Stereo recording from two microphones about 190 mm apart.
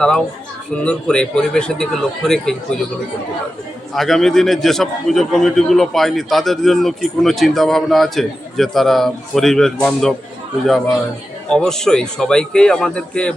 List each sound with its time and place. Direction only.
0.0 s a man's voice: 5° left (ahead or behind)
3.9 s a man's voice: centre (ahead or behind)
11.4 s a man's voice: 5° left (ahead or behind)